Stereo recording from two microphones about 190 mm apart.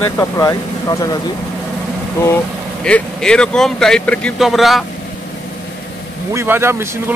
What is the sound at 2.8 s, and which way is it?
Speech, 5° left (ahead or behind).